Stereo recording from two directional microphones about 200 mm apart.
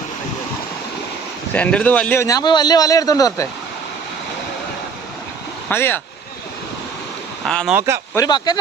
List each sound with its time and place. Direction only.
1.5 s a man's voice: 5° left (ahead or behind)
5.6 s a man's voice: 10° left (ahead or behind)
7.4 s speech: 5° left (ahead or behind)
7.8 s speech: 15° right (ahead or behind)
8.1 s speech: 20° left (ahead or behind)